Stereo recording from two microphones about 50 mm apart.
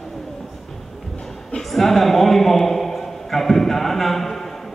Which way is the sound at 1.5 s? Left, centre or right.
Centre.